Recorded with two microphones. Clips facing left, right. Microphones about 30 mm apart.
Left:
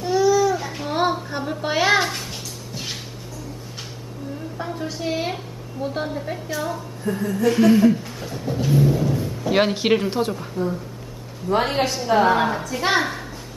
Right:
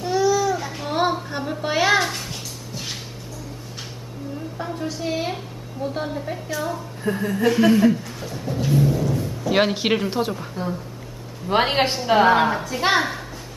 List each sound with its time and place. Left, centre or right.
0.0 s a sound: centre
4.6 s a sound: centre
7.1 s speech: right
7.4 s speech: centre
9.5 s speech: centre
11.4 s a woman's voice: right
12.1 s speech: right
12.4 s speech: centre